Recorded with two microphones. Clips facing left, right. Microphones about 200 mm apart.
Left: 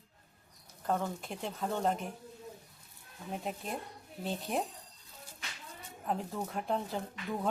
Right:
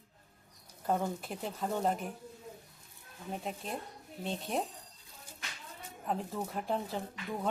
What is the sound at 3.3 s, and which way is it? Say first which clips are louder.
Speech: left 1 dB; centre (ahead or behind).